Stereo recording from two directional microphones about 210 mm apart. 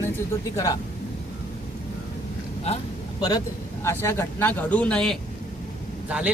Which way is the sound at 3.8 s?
10° left (ahead or behind).